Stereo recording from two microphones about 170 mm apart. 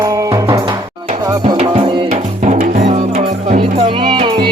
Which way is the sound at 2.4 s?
45° right (ahead or behind).